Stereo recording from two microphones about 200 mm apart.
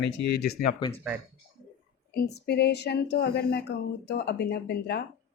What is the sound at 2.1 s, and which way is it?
A woman's voice, 55° left (ahead or behind).